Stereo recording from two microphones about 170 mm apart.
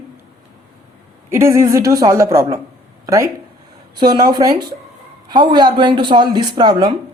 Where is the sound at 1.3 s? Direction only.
15° right (ahead or behind).